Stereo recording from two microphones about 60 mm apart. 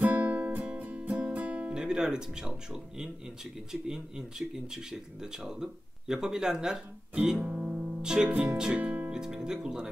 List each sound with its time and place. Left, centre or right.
0.0 s music: right
1.8 s speech: centre
7.4 s music: centre
9.1 s speech: centre